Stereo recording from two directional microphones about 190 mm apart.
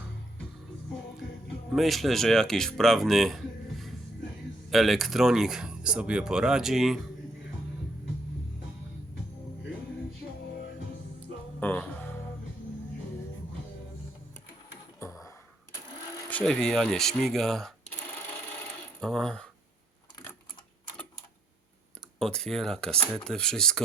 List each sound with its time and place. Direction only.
1.7 s speech: centre (ahead or behind)
11.6 s music: 10° left (ahead or behind)
14.9 s a sound: 15° left (ahead or behind)
16.3 s speech: 5° left (ahead or behind)
18.9 s speech: 5° left (ahead or behind)
22.2 s speech: 5° left (ahead or behind)